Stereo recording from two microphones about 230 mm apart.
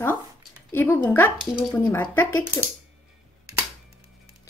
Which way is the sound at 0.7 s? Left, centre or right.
Centre.